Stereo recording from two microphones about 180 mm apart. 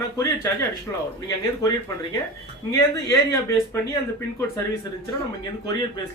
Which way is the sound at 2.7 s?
15° left (ahead or behind).